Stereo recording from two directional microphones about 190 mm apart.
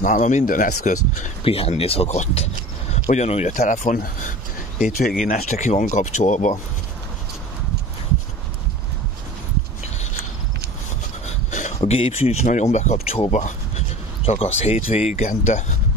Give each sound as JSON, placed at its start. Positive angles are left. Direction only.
{"t": 0.0, "sound": "speech", "side_deg": 40}
{"t": 1.4, "sound": "speech", "side_deg": 30}
{"t": 5.2, "sound": "speech", "side_deg": 40}
{"t": 11.2, "sound": "speech", "side_deg": 35}